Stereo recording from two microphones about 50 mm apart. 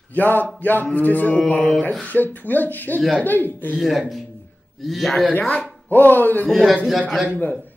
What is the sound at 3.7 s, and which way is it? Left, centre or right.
A man's voice, centre.